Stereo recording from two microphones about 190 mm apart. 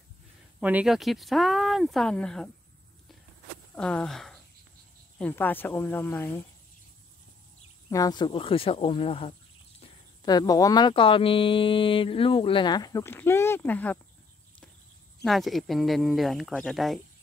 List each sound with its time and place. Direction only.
0.6 s speech: 5° right (ahead or behind)
3.7 s speech: 5° left (ahead or behind)
7.9 s speech: 20° left (ahead or behind)
15.2 s speech: centre (ahead or behind)